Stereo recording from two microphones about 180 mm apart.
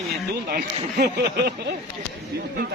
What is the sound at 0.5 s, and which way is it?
Speech, 60° right (ahead or behind).